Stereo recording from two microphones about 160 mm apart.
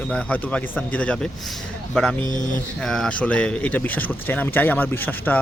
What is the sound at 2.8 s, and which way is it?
A man's voice, 5° left (ahead or behind).